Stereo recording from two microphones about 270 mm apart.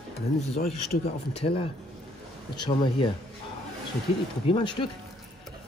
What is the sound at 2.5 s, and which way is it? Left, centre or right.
Speech, centre.